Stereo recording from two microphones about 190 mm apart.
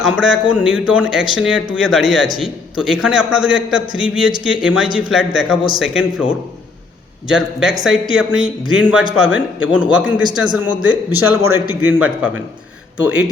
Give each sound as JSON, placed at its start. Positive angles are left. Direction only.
{"t": 0.0, "sound": "speech", "side_deg": -5}
{"t": 7.3, "sound": "a man's voice", "side_deg": -5}